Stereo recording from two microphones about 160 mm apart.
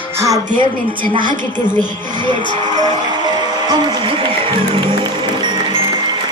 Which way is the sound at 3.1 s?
25° right (ahead or behind).